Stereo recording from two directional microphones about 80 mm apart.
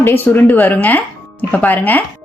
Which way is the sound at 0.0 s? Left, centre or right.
Left.